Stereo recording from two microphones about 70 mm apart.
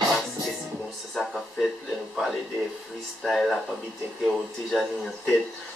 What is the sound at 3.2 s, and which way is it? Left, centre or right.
A man's voice, centre.